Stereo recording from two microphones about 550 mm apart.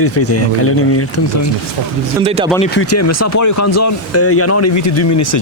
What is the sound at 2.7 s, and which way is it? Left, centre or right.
Speech, left.